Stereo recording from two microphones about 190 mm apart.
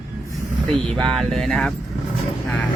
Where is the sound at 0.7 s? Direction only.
5° left (ahead or behind).